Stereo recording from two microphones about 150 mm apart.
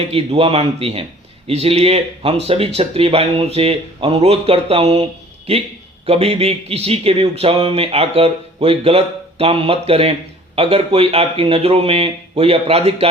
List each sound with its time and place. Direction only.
0.0 s a man's voice: 40° right (ahead or behind)
6.1 s a man's voice: 40° right (ahead or behind)